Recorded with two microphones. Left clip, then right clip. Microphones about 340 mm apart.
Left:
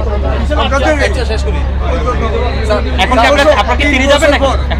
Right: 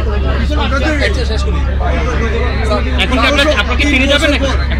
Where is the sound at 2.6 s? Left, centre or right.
Centre.